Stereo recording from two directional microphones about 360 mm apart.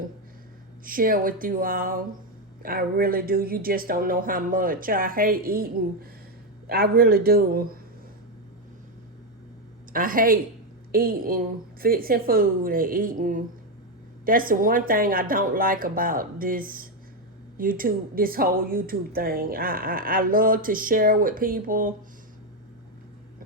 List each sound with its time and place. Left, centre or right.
0.9 s speech: right
9.9 s speech: right